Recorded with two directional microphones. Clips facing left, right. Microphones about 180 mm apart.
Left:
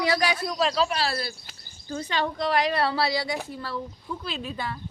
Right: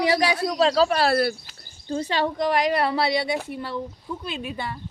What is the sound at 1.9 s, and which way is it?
Speech, 30° right (ahead or behind).